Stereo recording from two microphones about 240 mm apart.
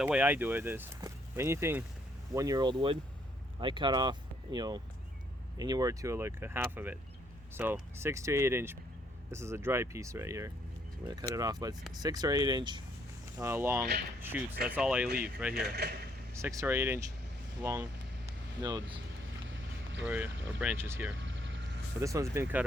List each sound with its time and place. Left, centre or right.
0.0 s speech: centre
15.5 s speech: right
16.3 s speech: centre
18.3 s vehicle: centre
20.1 s speech: centre
21.2 s a sound: right
22.0 s speech: centre